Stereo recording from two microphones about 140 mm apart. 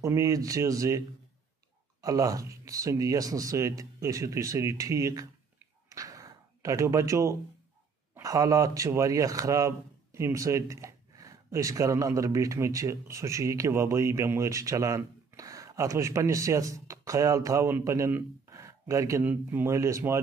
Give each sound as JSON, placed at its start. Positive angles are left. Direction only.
{"t": 0.0, "sound": "a man's voice", "side_deg": -25}
{"t": 5.9, "sound": "a sound", "side_deg": -25}
{"t": 8.1, "sound": "a man's voice", "side_deg": -25}